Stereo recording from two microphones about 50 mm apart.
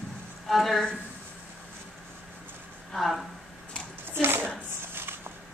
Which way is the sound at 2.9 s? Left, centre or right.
Centre.